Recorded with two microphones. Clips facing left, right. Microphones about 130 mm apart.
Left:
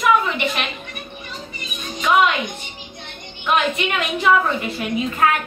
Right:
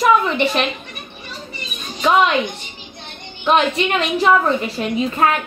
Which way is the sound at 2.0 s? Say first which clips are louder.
Right 2 dB; 30° right (ahead or behind).